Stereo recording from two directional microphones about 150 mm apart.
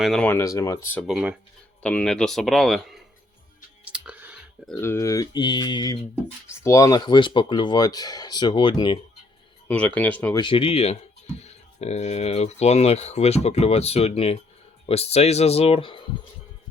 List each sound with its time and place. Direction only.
0.0 s speech: centre (ahead or behind)
0.3 s speech: 20° left (ahead or behind)
1.0 s speech: 5° right (ahead or behind)
1.8 s speech: 5° left (ahead or behind)
3.8 s clicking: 10° right (ahead or behind)
4.8 s speech: 20° left (ahead or behind)
9.6 s speech: 10° left (ahead or behind)
10.3 s speech: 35° left (ahead or behind)